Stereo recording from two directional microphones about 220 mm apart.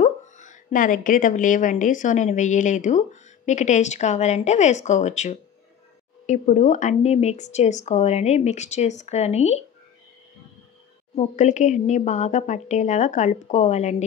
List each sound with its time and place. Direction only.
0.0 s a woman's voice: 35° left (ahead or behind)
11.1 s a woman's voice: 35° left (ahead or behind)